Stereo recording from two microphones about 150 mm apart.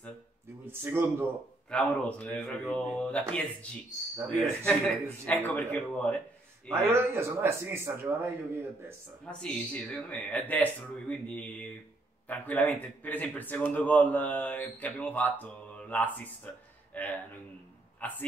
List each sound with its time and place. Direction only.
0.7 s a man's voice: 15° right (ahead or behind)
1.7 s a man's voice: 10° left (ahead or behind)
6.7 s a man's voice: 15° right (ahead or behind)
9.2 s a man's voice: 5° left (ahead or behind)